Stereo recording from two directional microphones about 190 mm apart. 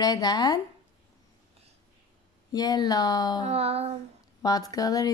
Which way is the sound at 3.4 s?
30° right (ahead or behind).